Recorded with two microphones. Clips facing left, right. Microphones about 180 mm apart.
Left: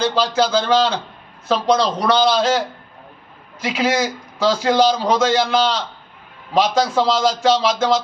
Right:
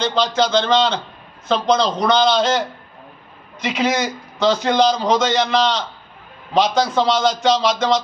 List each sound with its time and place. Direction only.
0.0 s a man's voice: 10° left (ahead or behind)